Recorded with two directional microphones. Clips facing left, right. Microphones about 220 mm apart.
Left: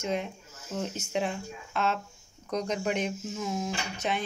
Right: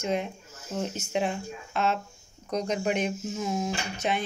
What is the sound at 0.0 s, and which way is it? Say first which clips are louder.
Speech: right 2 dB; 10° right (ahead or behind).